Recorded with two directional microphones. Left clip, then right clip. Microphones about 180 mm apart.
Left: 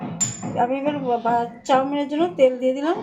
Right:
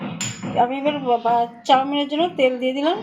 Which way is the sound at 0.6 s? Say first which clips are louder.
Right 2 dB; 30° right (ahead or behind).